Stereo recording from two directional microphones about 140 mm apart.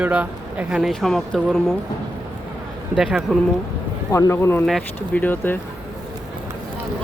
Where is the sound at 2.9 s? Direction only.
5° right (ahead or behind).